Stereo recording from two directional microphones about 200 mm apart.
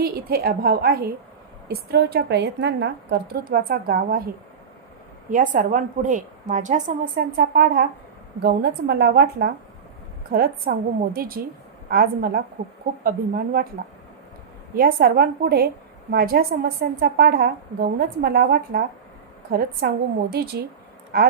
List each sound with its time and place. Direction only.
0.0 s a woman's voice: 50° right (ahead or behind)
5.3 s a woman's voice: 40° right (ahead or behind)
14.8 s a woman's voice: 50° right (ahead or behind)